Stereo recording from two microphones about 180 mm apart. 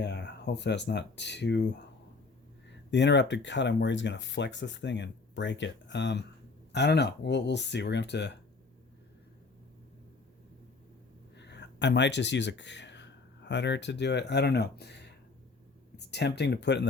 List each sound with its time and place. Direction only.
0.0 s speech: 70° left (ahead or behind)
11.3 s speech: 75° left (ahead or behind)